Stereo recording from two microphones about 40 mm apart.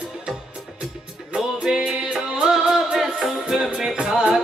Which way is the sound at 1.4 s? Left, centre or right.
Centre.